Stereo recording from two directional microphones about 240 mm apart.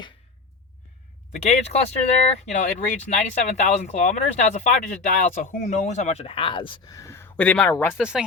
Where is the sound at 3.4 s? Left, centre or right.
Left; by 8.0 s centre.